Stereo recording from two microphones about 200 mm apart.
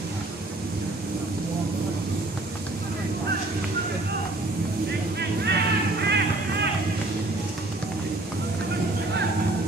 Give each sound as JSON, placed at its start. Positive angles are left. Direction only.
{"t": 5.4, "sound": "music", "side_deg": -55}